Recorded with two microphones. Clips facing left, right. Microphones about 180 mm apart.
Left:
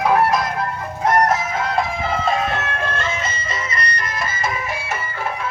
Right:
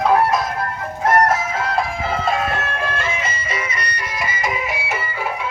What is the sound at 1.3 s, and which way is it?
Music, 5° right (ahead or behind).